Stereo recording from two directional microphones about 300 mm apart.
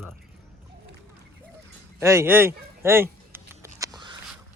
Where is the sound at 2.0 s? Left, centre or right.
Centre.